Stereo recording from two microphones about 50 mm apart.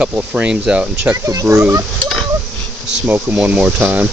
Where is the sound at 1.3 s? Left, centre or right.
Right.